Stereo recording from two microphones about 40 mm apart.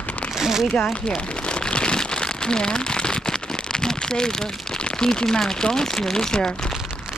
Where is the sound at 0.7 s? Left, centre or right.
Left.